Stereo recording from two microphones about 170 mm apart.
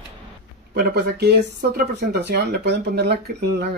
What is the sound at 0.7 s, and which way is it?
Speech, 70° right (ahead or behind).